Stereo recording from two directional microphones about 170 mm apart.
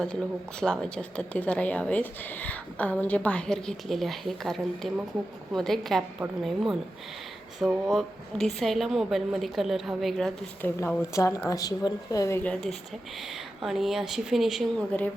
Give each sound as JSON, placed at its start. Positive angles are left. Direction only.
{"t": 0.6, "sound": "a woman's voice", "side_deg": 5}
{"t": 10.8, "sound": "a woman's voice", "side_deg": 20}